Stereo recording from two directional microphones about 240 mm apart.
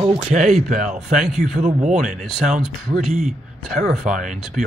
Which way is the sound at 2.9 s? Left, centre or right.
Centre.